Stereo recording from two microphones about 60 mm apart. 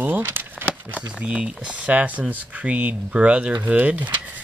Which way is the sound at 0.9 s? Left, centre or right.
Centre.